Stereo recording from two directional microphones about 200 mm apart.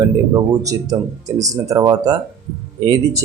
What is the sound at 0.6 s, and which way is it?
Speech, 15° right (ahead or behind).